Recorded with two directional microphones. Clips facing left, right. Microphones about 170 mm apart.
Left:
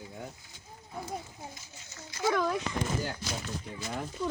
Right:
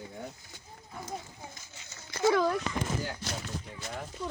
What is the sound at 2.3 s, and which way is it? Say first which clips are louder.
Speech: right 2 dB; 5° right (ahead or behind).